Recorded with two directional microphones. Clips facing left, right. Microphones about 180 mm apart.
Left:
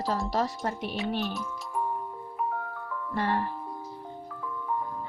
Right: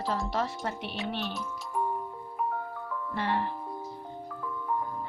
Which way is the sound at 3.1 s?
45° left (ahead or behind).